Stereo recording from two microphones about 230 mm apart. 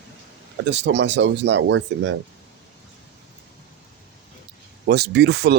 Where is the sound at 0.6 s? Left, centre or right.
Right.